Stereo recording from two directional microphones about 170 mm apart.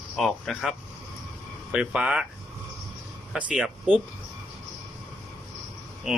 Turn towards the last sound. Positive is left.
turn(degrees=0)  # may be behind; listen again after turning